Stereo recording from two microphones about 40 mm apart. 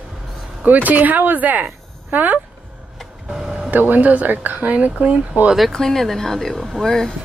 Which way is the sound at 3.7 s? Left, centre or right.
Right.